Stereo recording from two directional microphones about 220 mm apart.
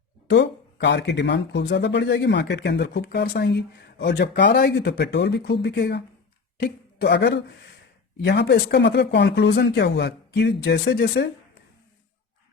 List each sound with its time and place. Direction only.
0.3 s speech: 55° left (ahead or behind)